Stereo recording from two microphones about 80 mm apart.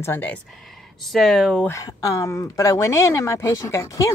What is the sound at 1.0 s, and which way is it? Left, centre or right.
Speech, centre.